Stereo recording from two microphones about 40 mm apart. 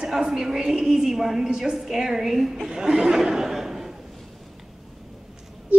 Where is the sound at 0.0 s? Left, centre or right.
Centre.